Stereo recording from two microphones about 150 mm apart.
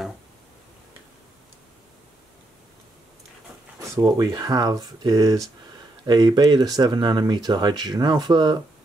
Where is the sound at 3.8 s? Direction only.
25° right (ahead or behind).